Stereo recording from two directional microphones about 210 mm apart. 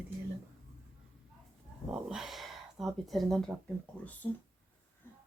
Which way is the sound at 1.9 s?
Centre (ahead or behind).